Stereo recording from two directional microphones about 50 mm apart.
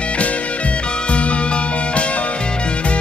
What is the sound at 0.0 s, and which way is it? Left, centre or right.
Music, left.